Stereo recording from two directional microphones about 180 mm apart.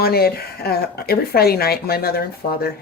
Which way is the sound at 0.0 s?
60° left (ahead or behind).